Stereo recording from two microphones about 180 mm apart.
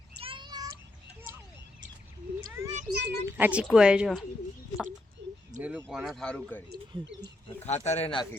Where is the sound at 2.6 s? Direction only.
15° right (ahead or behind).